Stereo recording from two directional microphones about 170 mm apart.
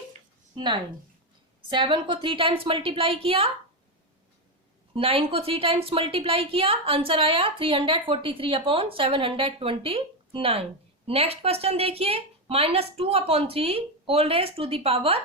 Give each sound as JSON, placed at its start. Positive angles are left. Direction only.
{"t": 0.5, "sound": "a woman's voice", "side_deg": -25}
{"t": 4.9, "sound": "a woman's voice", "side_deg": -35}